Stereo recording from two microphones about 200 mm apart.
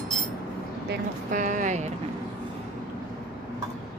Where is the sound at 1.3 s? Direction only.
40° right (ahead or behind).